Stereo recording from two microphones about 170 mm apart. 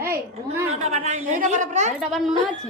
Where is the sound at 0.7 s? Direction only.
40° right (ahead or behind).